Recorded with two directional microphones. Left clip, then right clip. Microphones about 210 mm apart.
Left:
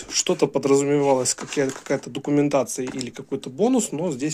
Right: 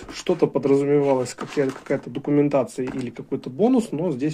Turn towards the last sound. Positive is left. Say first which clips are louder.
# right 1 dB
turn(degrees=30)  # may be behind; listen again after turning